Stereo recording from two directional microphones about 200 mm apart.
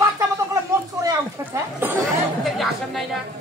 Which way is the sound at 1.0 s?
10° right (ahead or behind).